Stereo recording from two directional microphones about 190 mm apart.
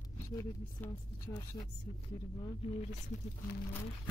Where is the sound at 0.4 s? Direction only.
20° left (ahead or behind).